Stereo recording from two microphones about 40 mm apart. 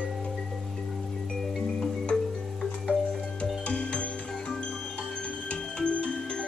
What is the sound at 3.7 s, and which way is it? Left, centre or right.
Music, left.